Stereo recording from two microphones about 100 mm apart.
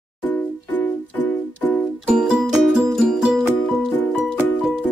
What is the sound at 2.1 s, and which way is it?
Music, 5° right (ahead or behind).